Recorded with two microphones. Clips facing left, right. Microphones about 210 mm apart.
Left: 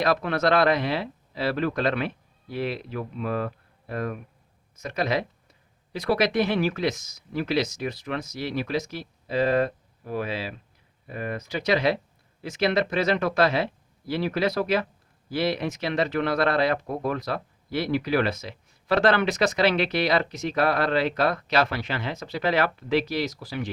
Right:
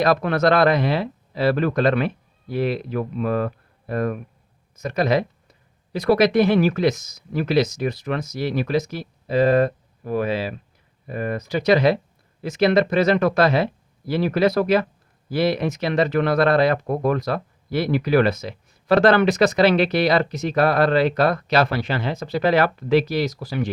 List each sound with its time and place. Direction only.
0.0 s speech: 45° right (ahead or behind)